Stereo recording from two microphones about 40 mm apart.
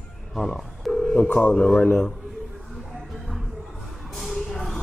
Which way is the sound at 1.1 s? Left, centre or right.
Left.